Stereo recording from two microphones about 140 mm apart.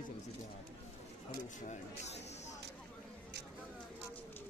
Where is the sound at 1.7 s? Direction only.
55° left (ahead or behind).